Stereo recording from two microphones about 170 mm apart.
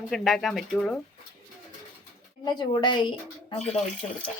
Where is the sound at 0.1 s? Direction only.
Centre (ahead or behind).